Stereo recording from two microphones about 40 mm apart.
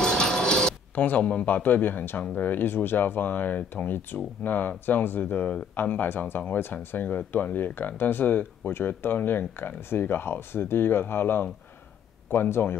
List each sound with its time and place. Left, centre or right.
0.0 s a sound: centre
0.9 s speech: left
9.8 s speech: left
12.3 s speech: left